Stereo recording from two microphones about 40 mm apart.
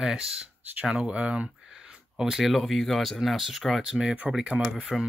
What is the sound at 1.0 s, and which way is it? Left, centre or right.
Speech, right.